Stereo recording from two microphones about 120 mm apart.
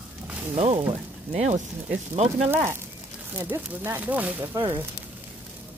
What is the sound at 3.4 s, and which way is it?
Speech, 20° right (ahead or behind).